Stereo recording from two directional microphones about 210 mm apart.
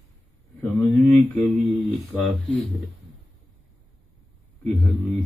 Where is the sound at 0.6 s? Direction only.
Centre (ahead or behind).